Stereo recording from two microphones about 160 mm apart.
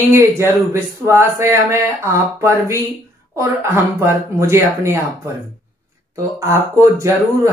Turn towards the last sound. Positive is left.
turn(degrees=-20)  # may be behind; listen again after turning